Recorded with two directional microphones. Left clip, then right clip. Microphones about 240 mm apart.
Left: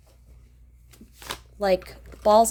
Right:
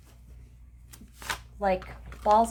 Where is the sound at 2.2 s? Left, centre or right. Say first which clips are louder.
Left 4 dB; left.